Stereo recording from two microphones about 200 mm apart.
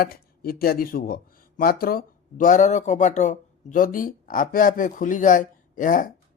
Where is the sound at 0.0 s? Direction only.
50° left (ahead or behind).